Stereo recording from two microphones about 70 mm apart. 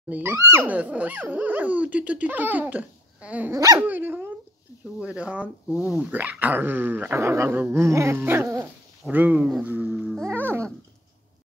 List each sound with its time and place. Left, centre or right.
0.1 s dog: right
0.7 s speech: right
3.8 s dog: right
4.9 s speech: centre
7.2 s dog: right
9.1 s speech: right
10.3 s dog: right